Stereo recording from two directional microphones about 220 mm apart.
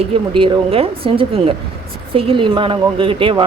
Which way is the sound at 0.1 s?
25° right (ahead or behind).